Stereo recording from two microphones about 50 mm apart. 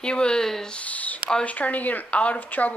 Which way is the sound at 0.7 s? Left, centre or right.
Left.